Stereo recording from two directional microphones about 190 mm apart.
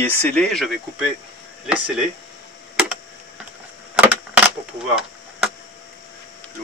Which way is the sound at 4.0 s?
5° right (ahead or behind).